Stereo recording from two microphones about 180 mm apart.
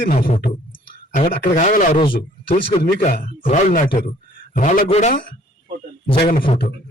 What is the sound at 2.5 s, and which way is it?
Speech, 30° left (ahead or behind).